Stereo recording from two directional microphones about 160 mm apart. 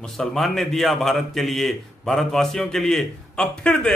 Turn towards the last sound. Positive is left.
turn(degrees=5)  # may be behind; listen again after turning